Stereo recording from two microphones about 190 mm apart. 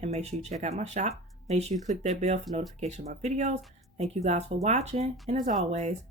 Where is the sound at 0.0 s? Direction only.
35° right (ahead or behind).